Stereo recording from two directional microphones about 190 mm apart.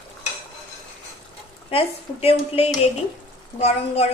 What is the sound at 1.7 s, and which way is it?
A woman's voice, 30° left (ahead or behind).